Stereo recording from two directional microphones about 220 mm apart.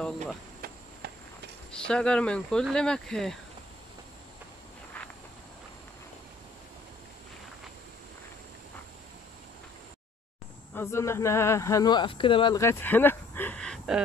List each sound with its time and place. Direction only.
1.0 s walk: 45° right (ahead or behind)
1.7 s speech: 5° left (ahead or behind)
10.7 s speech: 10° left (ahead or behind)